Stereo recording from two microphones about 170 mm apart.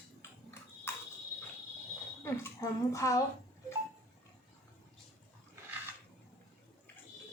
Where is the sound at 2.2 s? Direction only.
15° left (ahead or behind).